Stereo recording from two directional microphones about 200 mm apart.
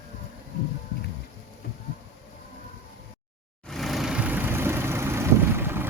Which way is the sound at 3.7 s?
Centre (ahead or behind).